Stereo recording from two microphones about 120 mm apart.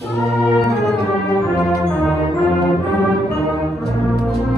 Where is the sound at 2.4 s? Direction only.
Centre (ahead or behind).